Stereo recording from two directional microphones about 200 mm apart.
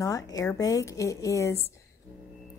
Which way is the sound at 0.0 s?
15° left (ahead or behind).